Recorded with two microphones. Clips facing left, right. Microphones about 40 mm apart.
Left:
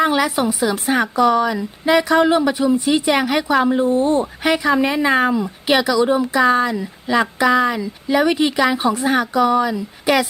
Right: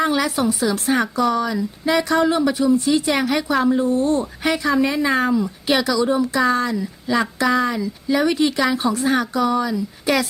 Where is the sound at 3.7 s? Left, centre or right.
Left.